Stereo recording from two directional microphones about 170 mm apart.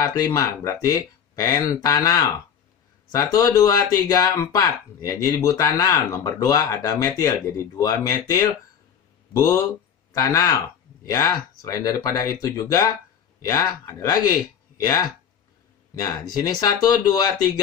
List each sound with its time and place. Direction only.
0.0 s speech: 20° left (ahead or behind)
15.9 s speech: 20° left (ahead or behind)